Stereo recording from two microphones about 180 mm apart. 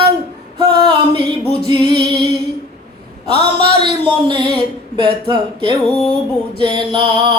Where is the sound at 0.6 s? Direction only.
25° right (ahead or behind).